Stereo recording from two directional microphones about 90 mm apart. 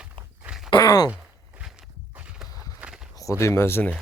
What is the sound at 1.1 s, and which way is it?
Walk, 10° right (ahead or behind).